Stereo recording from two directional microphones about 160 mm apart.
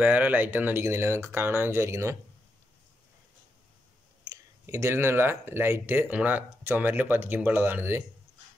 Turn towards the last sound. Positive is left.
turn(degrees=-15)  # may be behind; listen again after turning